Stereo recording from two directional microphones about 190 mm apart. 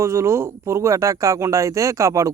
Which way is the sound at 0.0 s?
15° right (ahead or behind).